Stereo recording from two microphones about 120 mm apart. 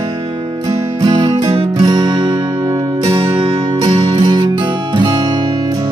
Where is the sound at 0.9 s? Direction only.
35° right (ahead or behind).